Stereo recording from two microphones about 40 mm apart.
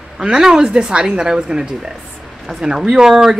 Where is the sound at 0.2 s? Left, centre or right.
Centre.